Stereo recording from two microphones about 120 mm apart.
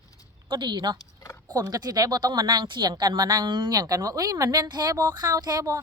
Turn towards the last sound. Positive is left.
turn(degrees=-30)  # may be behind; listen again after turning